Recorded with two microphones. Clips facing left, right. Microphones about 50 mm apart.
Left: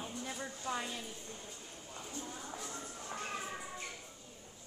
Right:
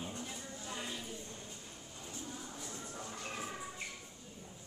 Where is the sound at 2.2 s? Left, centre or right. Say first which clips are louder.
Even; left.